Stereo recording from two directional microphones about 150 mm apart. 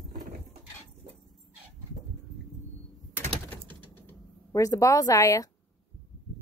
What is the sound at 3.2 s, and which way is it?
Typewriter, 15° left (ahead or behind).